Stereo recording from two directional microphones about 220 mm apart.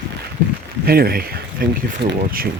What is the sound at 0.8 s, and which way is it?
Speech, 45° right (ahead or behind).